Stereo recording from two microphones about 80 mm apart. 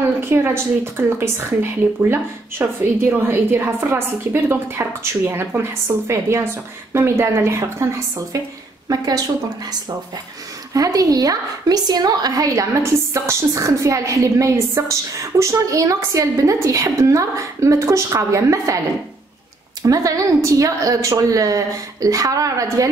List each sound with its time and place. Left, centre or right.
0.2 s a woman's voice: right
8.8 s a woman's voice: right
10.7 s a woman's voice: right
19.8 s a woman's voice: right